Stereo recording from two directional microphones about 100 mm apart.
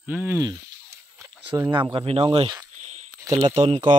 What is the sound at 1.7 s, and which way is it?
Speech, 50° right (ahead or behind).